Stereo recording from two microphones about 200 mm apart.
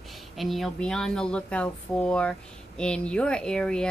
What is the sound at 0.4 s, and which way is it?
Speech, centre (ahead or behind).